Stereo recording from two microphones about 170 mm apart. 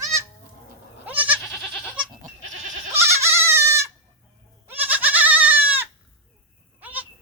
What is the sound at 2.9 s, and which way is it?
Goat, 15° right (ahead or behind).